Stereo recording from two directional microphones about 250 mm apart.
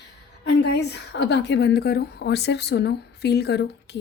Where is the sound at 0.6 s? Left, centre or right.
Left.